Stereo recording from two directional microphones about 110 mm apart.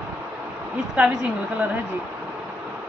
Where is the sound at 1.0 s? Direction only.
10° right (ahead or behind).